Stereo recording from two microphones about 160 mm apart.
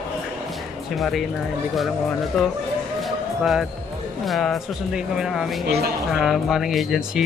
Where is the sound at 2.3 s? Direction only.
Centre (ahead or behind).